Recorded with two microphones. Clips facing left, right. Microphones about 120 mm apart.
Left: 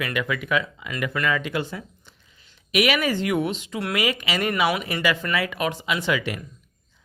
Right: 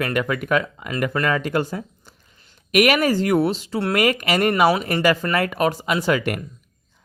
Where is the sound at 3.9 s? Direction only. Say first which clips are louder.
Right 6 dB; 50° right (ahead or behind).